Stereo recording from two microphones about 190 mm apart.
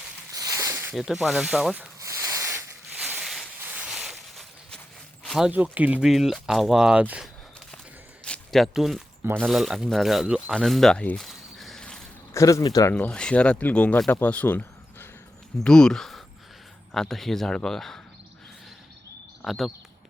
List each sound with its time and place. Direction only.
0.3 s a sound: 20° right (ahead or behind)
0.9 s speech: centre (ahead or behind)
2.0 s a sound: 15° right (ahead or behind); by 5.5 s centre (ahead or behind)
5.5 s speech: 10° right (ahead or behind)
8.2 s a sound: 5° left (ahead or behind)
9.2 s speech: 10° right (ahead or behind)
12.3 s speech: 15° left (ahead or behind)
12.9 s speech: 5° left (ahead or behind)
19.4 s speech: centre (ahead or behind)